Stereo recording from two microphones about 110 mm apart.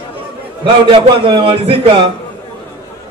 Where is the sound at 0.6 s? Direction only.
45° right (ahead or behind).